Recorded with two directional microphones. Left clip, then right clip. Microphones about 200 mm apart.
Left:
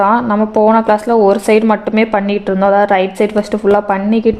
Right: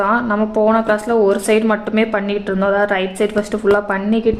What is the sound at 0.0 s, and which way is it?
Speech, 35° left (ahead or behind).